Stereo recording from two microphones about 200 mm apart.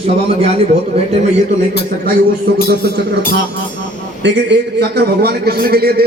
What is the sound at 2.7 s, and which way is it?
Speech, 55° right (ahead or behind).